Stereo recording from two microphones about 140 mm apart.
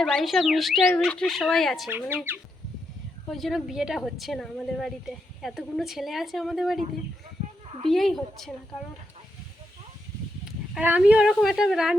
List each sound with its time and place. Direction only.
0.0 s speech: centre (ahead or behind)
1.9 s speech: 15° right (ahead or behind)
3.2 s speech: centre (ahead or behind)
7.4 s a sound: 55° right (ahead or behind)
7.9 s speech: centre (ahead or behind)
10.4 s speech: 10° right (ahead or behind)